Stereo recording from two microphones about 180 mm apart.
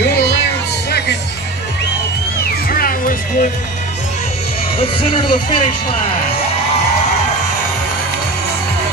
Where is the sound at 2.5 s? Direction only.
55° left (ahead or behind).